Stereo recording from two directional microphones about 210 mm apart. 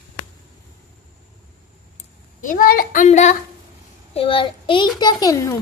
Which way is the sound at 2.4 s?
40° left (ahead or behind).